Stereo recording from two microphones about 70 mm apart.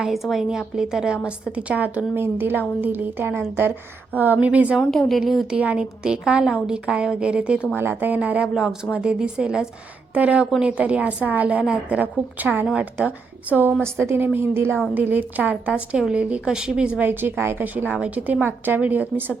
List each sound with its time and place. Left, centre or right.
0.0 s a woman's voice: centre
2.1 s a woman's voice: right
4.9 s a woman's voice: centre
5.5 s a woman's voice: centre
7.8 s a woman's voice: right
13.8 s a woman's voice: right; by 16.9 s centre
17.0 s a woman's voice: right